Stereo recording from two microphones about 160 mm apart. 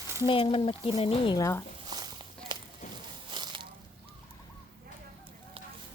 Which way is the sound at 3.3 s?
30° right (ahead or behind).